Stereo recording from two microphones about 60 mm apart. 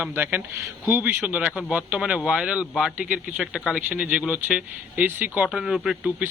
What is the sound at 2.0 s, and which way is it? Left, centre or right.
Speech, centre.